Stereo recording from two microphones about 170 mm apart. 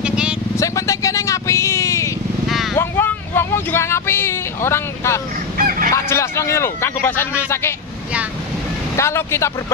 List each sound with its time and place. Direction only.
0.0 s vehicle: 5° right (ahead or behind)
0.6 s vehicle: 20° left (ahead or behind)
2.4 s vehicle: centre (ahead or behind)
2.7 s a sound: 15° left (ahead or behind)
5.6 s fowl: 55° right (ahead or behind)
5.9 s a sound: 15° left (ahead or behind)
8.9 s speech: 15° left (ahead or behind)